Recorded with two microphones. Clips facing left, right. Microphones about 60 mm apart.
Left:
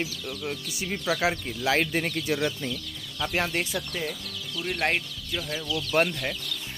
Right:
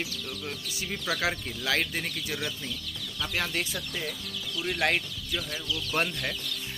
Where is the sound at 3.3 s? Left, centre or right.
Left.